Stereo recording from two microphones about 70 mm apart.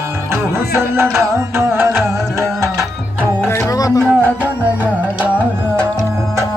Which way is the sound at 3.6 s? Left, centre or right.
Left.